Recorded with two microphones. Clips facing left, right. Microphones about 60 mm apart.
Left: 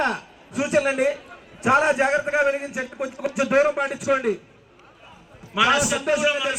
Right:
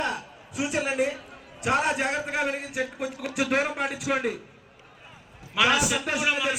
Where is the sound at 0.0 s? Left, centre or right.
Left.